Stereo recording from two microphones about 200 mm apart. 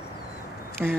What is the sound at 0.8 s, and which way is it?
Speech, 10° right (ahead or behind).